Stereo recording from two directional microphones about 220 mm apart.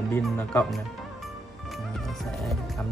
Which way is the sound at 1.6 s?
Centre (ahead or behind).